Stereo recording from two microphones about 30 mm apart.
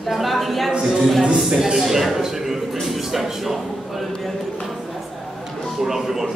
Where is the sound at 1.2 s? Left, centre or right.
Right.